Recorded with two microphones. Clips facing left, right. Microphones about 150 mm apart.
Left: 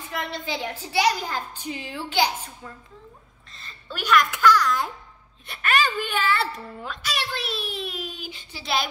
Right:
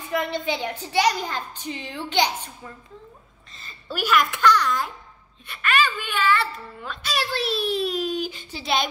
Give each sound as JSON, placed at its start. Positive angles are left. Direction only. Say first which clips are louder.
{"t": 0.1, "sound": "a child's voice", "louder": "right 5 dB", "side_deg": 0}
{"t": 3.5, "sound": "a child's voice", "louder": "right 4 dB", "side_deg": -5}
{"t": 5.6, "sound": "speech", "louder": "even", "side_deg": 40}
{"t": 7.0, "sound": "a child's voice", "louder": "right 5 dB", "side_deg": -35}